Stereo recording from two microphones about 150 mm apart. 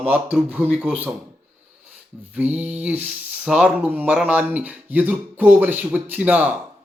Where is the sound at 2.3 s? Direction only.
10° right (ahead or behind).